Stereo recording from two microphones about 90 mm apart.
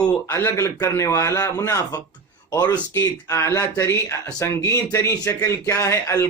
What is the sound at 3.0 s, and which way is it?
Speech, 30° left (ahead or behind).